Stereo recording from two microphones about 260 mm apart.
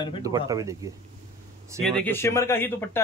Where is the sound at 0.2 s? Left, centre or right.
Centre.